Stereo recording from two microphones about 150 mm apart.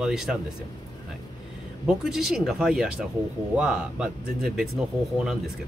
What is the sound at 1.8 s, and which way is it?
Speech, 5° right (ahead or behind).